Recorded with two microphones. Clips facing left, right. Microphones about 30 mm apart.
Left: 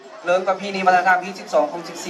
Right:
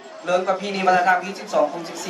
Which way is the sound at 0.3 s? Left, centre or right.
Centre.